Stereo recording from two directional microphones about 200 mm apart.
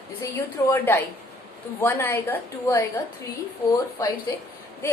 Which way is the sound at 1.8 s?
10° left (ahead or behind).